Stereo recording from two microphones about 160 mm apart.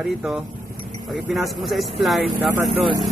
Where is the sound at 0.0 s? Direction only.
Centre (ahead or behind).